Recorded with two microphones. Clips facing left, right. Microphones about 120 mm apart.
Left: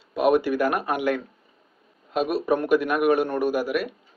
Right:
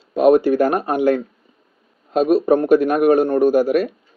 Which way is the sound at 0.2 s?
35° right (ahead or behind).